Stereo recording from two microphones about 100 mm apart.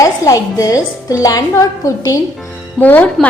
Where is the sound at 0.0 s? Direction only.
35° left (ahead or behind).